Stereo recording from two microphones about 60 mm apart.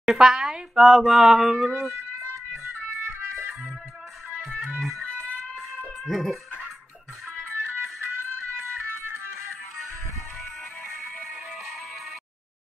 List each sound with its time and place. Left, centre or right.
0.0 s speech: centre
3.0 s music: right
4.4 s music: centre
6.0 s dog: centre
7.5 s music: right